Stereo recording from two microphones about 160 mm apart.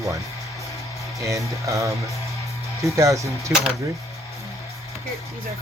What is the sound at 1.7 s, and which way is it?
Speech, 20° right (ahead or behind).